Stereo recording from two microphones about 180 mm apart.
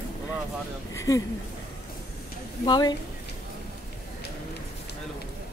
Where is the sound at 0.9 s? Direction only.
20° left (ahead or behind).